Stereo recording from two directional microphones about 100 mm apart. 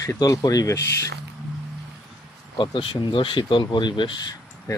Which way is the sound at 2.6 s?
55° left (ahead or behind).